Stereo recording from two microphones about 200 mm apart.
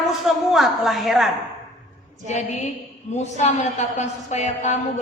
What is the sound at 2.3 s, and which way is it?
A woman's voice, 35° left (ahead or behind).